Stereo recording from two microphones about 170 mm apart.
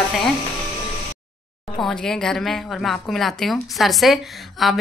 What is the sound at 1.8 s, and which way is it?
A woman's voice, 5° left (ahead or behind).